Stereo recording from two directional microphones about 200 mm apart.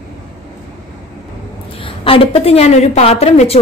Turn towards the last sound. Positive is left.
turn(degrees=30)  # may be behind; listen again after turning